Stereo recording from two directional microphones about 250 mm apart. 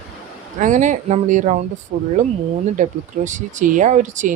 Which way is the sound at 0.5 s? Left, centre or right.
Right.